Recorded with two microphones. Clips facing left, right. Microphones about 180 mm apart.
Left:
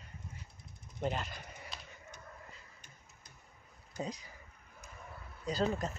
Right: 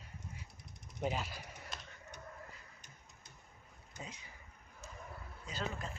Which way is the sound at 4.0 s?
35° left (ahead or behind).